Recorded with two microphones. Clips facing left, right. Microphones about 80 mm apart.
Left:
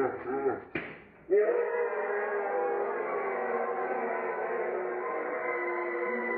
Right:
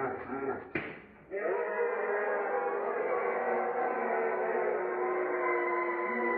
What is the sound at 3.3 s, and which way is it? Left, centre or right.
Gong, centre.